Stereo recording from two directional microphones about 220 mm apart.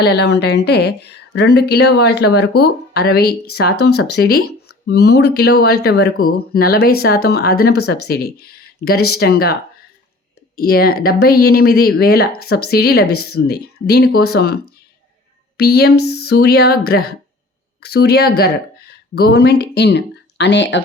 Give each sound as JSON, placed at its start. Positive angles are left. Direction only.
{"t": 0.0, "sound": "speech", "side_deg": 50}